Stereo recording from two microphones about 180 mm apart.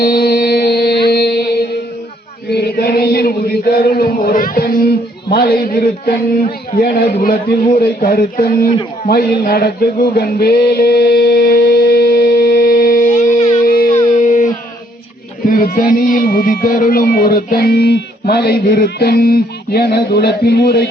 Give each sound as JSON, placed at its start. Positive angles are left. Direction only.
{"t": 0.0, "sound": "music", "side_deg": 60}
{"t": 1.0, "sound": "mantra", "side_deg": 65}
{"t": 2.5, "sound": "chant", "side_deg": 65}
{"t": 7.2, "sound": "a man's voice", "side_deg": 55}
{"t": 9.0, "sound": "music", "side_deg": 55}
{"t": 13.7, "sound": "a sound", "side_deg": 55}
{"t": 15.4, "sound": "speech", "side_deg": 55}